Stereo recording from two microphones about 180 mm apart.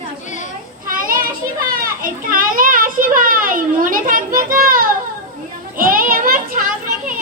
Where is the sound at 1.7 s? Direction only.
50° right (ahead or behind).